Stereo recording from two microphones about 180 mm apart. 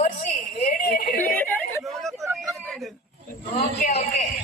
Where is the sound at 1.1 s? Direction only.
10° left (ahead or behind).